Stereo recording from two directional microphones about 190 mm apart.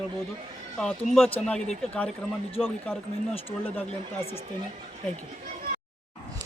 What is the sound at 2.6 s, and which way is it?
Speech, centre (ahead or behind).